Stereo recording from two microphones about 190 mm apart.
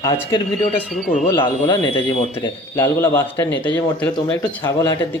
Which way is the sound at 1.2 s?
25° left (ahead or behind).